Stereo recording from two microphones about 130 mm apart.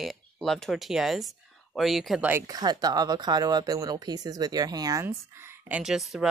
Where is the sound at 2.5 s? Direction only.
30° right (ahead or behind); by 6.3 s centre (ahead or behind).